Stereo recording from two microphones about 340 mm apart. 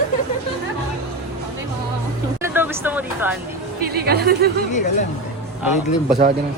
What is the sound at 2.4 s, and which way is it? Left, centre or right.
Speech, centre.